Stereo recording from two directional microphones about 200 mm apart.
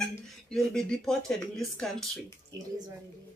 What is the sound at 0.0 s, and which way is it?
Speech, 5° left (ahead or behind).